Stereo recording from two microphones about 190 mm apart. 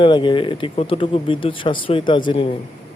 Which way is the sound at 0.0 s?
25° left (ahead or behind).